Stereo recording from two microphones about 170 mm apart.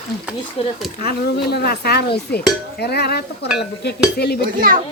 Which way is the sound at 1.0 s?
70° left (ahead or behind).